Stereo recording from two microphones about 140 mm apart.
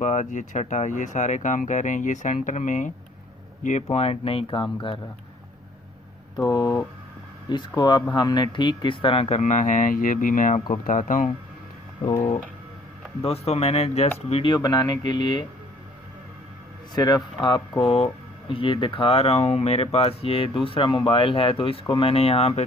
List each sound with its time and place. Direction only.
0.0 s speech: 60° left (ahead or behind)
3.9 s speech: 45° left (ahead or behind)
6.4 s speech: 30° left (ahead or behind); by 11.2 s 65° left (ahead or behind)
13.2 s speech: 45° left (ahead or behind)
16.9 s speech: 30° left (ahead or behind); by 22.7 s 45° left (ahead or behind)